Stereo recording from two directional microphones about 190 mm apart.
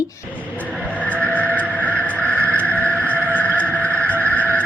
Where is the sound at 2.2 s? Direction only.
10° right (ahead or behind).